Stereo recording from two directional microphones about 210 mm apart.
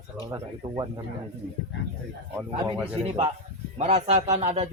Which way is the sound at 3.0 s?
30° right (ahead or behind).